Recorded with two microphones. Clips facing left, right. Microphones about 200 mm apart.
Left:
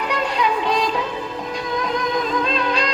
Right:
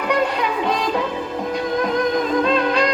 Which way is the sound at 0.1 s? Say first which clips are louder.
Right 3 dB; 55° right (ahead or behind).